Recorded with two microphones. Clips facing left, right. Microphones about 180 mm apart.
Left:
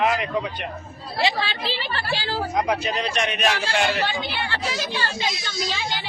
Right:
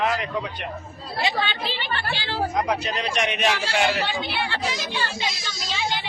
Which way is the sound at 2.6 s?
Centre (ahead or behind).